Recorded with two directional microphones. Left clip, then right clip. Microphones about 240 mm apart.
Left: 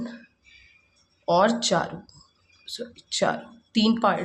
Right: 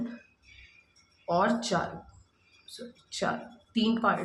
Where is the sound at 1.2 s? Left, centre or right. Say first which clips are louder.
Left 6 dB; left.